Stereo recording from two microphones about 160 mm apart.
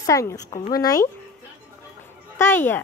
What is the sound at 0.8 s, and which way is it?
Speech, 20° left (ahead or behind).